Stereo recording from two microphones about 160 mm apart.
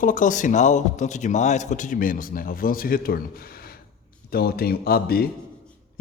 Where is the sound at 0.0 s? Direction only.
55° left (ahead or behind).